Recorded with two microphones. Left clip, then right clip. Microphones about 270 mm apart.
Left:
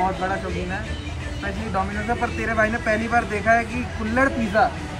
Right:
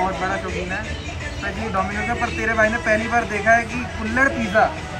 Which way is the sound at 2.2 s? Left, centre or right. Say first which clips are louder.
Right 3 dB; centre.